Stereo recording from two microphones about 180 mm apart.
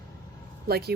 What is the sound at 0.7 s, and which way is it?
Speech, 60° right (ahead or behind).